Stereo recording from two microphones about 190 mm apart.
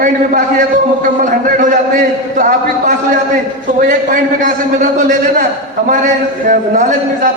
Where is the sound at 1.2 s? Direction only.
45° right (ahead or behind).